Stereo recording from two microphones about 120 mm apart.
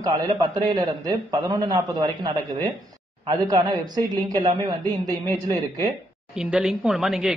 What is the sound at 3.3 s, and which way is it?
A man's voice, 35° right (ahead or behind).